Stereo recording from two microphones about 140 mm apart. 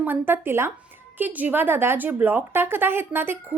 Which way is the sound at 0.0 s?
15° right (ahead or behind).